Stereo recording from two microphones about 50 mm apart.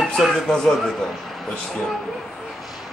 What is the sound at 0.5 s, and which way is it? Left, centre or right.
Speech, centre.